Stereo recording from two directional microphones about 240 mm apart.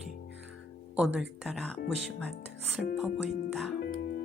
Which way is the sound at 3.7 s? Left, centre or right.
Left.